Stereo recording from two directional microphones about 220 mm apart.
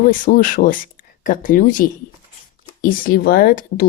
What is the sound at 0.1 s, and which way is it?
Speech, 40° left (ahead or behind).